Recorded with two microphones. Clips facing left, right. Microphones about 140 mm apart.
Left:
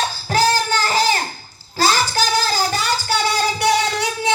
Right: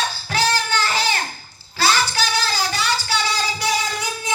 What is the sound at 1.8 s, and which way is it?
Child singing, 40° left (ahead or behind).